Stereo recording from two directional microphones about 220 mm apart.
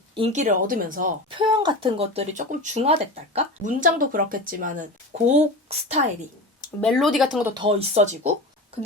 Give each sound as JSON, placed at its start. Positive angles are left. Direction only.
{"t": 0.1, "sound": "speech", "side_deg": -30}
{"t": 1.4, "sound": "speech", "side_deg": -20}
{"t": 6.8, "sound": "speech", "side_deg": 0}
{"t": 7.5, "sound": "speech", "side_deg": -25}